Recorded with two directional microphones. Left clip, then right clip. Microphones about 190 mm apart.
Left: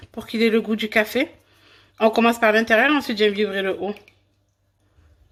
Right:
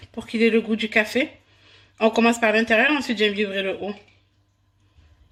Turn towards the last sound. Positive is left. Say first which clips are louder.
# left 2 dB
turn(degrees=25)  # may be behind; listen again after turning